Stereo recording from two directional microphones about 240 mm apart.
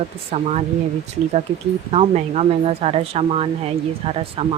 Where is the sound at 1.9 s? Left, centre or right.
Right.